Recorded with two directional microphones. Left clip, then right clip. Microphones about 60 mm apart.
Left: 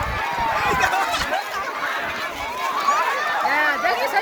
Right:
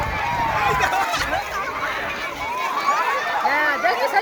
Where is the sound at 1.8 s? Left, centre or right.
Left.